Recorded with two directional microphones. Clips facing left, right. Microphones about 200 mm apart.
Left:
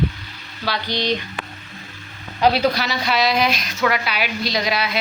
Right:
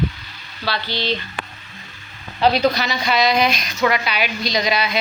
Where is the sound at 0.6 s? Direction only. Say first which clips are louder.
Left 1 dB; 15° left (ahead or behind).